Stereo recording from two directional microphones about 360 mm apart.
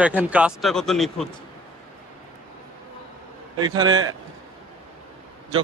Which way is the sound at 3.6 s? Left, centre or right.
Centre.